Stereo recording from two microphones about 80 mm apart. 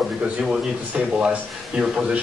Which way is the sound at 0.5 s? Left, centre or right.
Centre.